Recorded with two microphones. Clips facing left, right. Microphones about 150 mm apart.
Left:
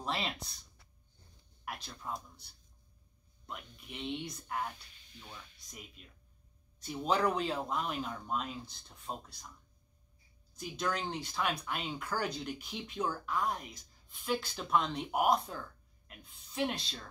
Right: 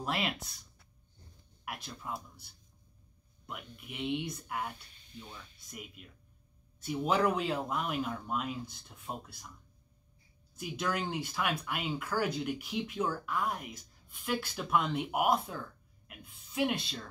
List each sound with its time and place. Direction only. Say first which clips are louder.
0.0 s speech: right 2 dB; 5° right (ahead or behind)
1.6 s speech: right 1 dB; centre (ahead or behind)
3.4 s speech: right 2 dB; 5° right (ahead or behind)
10.5 s speech: right 1 dB; 5° right (ahead or behind)